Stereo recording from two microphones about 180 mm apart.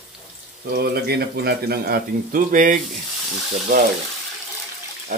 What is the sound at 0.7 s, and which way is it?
Speech, 60° right (ahead or behind).